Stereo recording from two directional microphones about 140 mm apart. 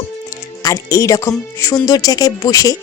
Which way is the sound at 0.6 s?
20° left (ahead or behind).